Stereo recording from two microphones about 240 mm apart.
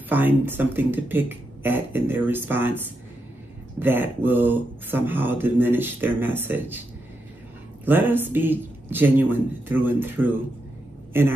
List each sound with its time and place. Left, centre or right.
0.1 s speech: centre
3.8 s speech: centre
7.8 s speech: centre